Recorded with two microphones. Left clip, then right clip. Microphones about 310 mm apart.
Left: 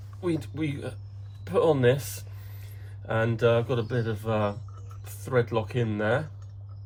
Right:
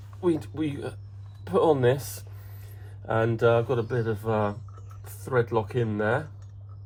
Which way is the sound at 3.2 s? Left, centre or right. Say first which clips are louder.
Right 1 dB; centre.